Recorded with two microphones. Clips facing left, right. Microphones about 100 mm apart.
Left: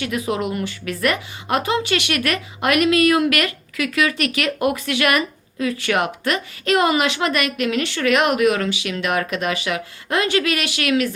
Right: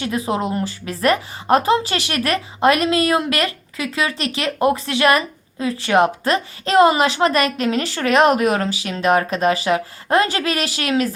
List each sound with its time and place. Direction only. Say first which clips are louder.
0.0 s speech: right 1 dB; 30° right (ahead or behind)